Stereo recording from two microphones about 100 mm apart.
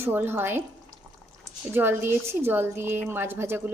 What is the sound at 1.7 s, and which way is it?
Speech, 20° right (ahead or behind).